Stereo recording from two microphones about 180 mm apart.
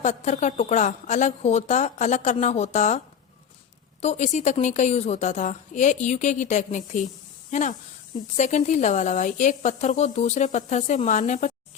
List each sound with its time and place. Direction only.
0.0 s a woman's voice: 40° left (ahead or behind)
4.0 s a woman's voice: 40° left (ahead or behind)